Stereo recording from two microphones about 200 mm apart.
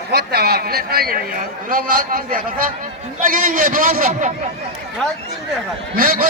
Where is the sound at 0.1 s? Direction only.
55° right (ahead or behind).